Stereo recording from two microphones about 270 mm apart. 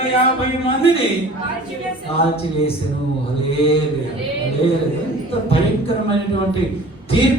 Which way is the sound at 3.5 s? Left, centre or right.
Left.